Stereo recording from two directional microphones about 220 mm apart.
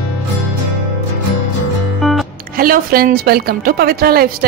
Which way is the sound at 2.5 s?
40° right (ahead or behind).